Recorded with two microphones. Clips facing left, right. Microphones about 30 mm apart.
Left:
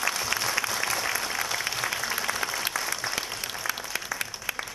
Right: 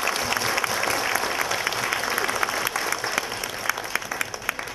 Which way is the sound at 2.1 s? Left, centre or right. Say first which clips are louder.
Right 5 dB; right.